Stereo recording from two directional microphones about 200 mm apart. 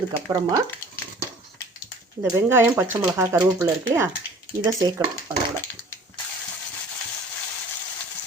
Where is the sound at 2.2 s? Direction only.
10° right (ahead or behind).